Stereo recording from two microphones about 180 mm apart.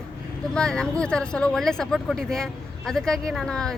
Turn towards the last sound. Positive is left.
turn(degrees=5)  # may be behind; listen again after turning